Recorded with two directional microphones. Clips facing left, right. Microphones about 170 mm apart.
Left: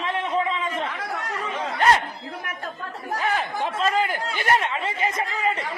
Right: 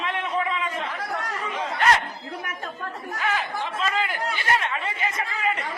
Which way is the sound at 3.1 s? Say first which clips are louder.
Left 3 dB; 35° left (ahead or behind).